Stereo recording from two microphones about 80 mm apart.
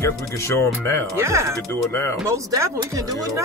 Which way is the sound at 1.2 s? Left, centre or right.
Right.